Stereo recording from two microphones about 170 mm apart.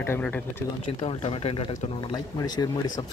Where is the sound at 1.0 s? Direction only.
35° left (ahead or behind).